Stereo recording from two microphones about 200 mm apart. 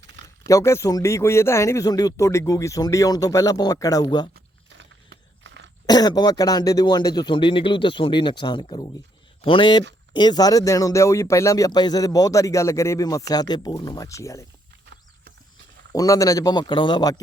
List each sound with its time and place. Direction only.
0.4 s speech: 15° left (ahead or behind)
4.4 s a sound: 60° right (ahead or behind)
5.8 s speech: 20° left (ahead or behind)
15.9 s speech: 15° left (ahead or behind)